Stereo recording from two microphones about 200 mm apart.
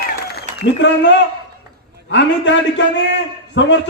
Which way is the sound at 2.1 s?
65° left (ahead or behind).